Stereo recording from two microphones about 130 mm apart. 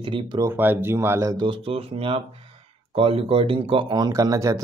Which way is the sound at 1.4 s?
45° right (ahead or behind).